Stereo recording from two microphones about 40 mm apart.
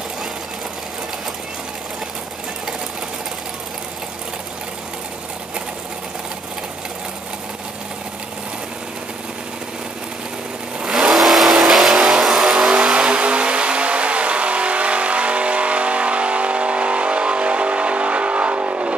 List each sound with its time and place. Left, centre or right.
10.8 s vehicle: centre
11.1 s vehicle: centre; by 18.9 s right